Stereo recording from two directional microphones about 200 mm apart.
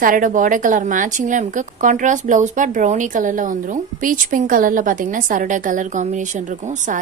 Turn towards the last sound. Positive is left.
turn(degrees=-40)  # may be behind; listen again after turning